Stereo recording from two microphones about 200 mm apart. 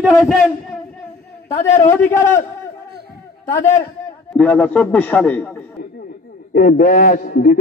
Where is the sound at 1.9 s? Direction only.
15° left (ahead or behind).